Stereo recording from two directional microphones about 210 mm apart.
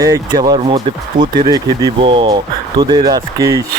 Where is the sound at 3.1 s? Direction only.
15° right (ahead or behind).